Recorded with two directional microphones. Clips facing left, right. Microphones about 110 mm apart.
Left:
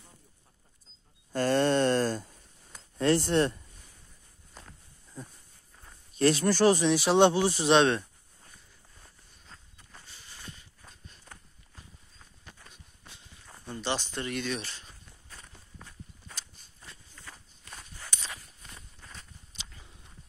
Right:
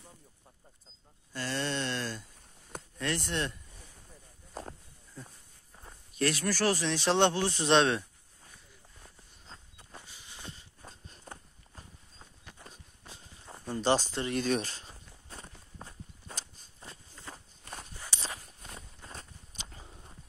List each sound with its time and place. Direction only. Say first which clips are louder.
1.3 s a sound: left 10 dB; 50° left (ahead or behind)
3.0 s speech: left 9 dB; 35° left (ahead or behind)
6.1 s speech: left 6 dB; 25° left (ahead or behind); by 8.0 s centre (ahead or behind)
9.5 s walk: right 3 dB; 15° right (ahead or behind)
10.4 s walk: right 2 dB; 25° right (ahead or behind)
13.5 s a sound: right 5 dB; 35° right (ahead or behind)
14.1 s walk: right 3 dB; 30° right (ahead or behind)
17.7 s walk: right 1 dB; 15° right (ahead or behind)
18.1 s walk: right 3 dB; 30° right (ahead or behind)
19.1 s walk: right 3 dB; 45° right (ahead or behind)